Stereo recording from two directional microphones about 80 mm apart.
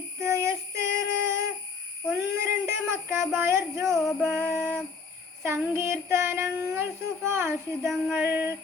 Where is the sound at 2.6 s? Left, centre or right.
Right.